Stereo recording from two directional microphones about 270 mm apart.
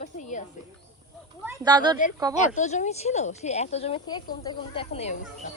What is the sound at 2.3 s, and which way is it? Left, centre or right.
A woman's voice, left.